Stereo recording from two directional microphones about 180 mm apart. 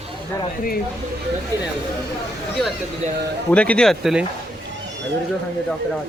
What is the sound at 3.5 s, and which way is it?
Speech, 5° left (ahead or behind).